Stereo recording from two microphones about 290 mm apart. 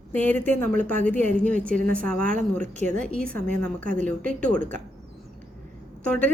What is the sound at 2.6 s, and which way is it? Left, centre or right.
Speech, right.